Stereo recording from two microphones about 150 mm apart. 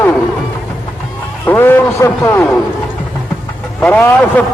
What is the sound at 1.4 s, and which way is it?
A man's voice, 15° left (ahead or behind).